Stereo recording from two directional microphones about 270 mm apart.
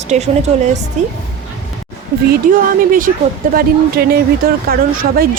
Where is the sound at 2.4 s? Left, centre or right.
Right.